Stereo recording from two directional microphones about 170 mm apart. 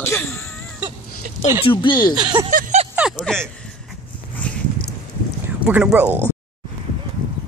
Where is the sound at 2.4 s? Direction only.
40° right (ahead or behind).